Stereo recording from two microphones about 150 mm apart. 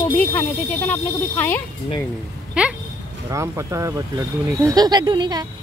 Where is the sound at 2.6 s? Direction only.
5° right (ahead or behind).